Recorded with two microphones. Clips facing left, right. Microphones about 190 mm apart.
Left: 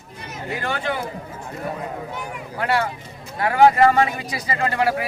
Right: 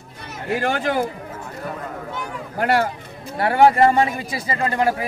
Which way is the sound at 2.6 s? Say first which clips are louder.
Right 3 dB; 45° right (ahead or behind).